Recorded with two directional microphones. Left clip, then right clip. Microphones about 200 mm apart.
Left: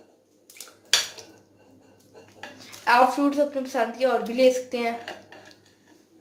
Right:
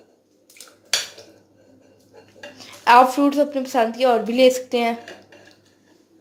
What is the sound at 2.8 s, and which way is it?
A woman's voice, 45° right (ahead or behind).